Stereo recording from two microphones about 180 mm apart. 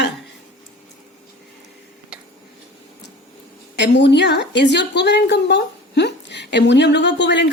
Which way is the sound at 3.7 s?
75° left (ahead or behind).